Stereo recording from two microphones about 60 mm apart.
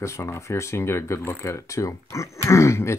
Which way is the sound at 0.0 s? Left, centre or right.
Left.